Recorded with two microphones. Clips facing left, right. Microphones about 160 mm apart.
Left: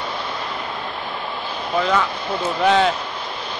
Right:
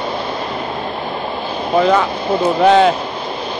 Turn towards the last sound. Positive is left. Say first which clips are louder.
# right 6 dB
turn(degrees=-30)  # may be behind; listen again after turning